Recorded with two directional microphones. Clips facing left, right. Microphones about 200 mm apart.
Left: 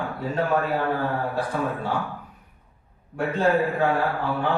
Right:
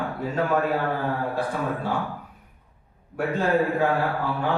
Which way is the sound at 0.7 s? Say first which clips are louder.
Left 1 dB; centre (ahead or behind).